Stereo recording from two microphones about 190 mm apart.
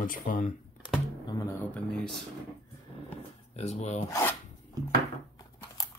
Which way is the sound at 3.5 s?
35° left (ahead or behind).